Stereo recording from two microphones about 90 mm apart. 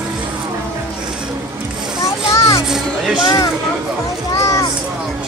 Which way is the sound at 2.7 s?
5° right (ahead or behind).